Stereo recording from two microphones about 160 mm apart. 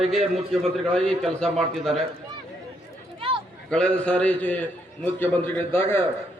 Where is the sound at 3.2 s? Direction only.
35° right (ahead or behind).